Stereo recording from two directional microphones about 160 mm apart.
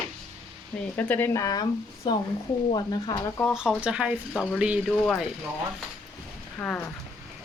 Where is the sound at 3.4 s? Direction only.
Centre (ahead or behind).